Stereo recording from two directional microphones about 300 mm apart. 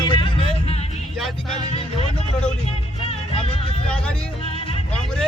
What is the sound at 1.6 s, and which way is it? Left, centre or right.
Speech, centre.